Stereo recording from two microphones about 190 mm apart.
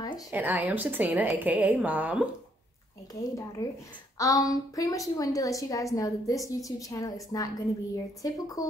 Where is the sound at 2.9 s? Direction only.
15° left (ahead or behind).